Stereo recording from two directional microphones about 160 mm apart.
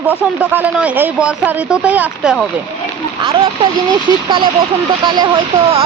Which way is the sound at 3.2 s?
35° right (ahead or behind).